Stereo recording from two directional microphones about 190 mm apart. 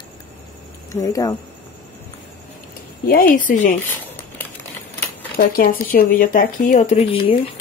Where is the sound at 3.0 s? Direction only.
50° left (ahead or behind).